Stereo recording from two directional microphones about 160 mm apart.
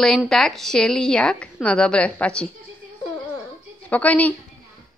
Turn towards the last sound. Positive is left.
turn(degrees=10)  # may be behind; listen again after turning